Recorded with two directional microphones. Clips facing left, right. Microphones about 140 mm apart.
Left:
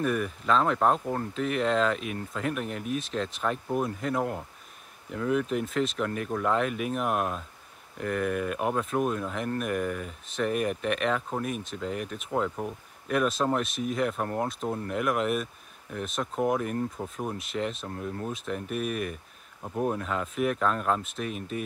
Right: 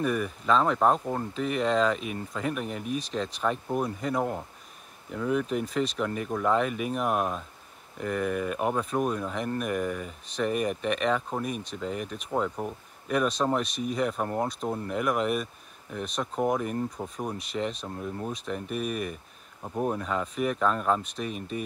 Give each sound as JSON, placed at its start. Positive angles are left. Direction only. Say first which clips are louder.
{"t": 0.0, "sound": "speech", "louder": "even", "side_deg": 0}